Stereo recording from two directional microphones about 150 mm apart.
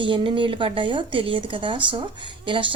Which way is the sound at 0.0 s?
35° right (ahead or behind).